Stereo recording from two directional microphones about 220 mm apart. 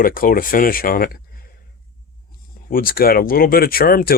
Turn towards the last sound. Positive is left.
turn(degrees=40)  # may be behind; listen again after turning